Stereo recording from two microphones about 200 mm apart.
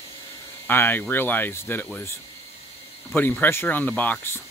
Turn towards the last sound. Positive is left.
turn(degrees=10)  # may be behind; listen again after turning